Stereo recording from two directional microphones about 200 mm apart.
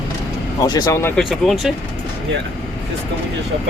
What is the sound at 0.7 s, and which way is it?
Speech, 20° left (ahead or behind).